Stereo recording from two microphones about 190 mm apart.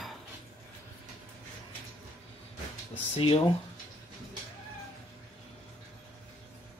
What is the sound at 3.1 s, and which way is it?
Speech, 30° left (ahead or behind).